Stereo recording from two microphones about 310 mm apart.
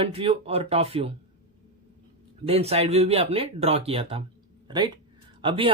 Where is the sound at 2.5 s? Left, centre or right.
Centre.